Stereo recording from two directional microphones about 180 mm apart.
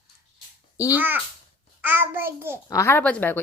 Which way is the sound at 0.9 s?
10° right (ahead or behind).